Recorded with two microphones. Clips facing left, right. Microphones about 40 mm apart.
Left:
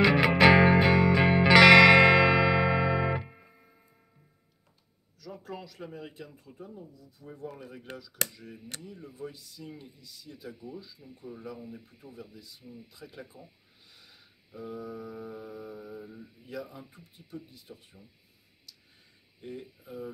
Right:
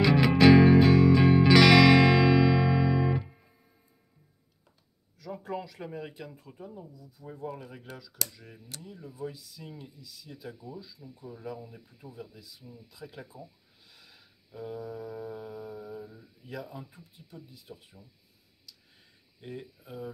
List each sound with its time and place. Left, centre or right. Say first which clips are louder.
0.0 s music: even; left
5.3 s speech: right 5 dB; right
8.2 s speech: left 4 dB; left
8.9 s music: right 4 dB; centre
10.3 s speech: even; centre
13.0 s speech: right 5 dB; centre
14.8 s music: right 1 dB; centre
15.5 s speech: right 1 dB; centre
16.0 s mantra: even; left
17.7 s music: right 2 dB; centre
19.4 s speech: even; right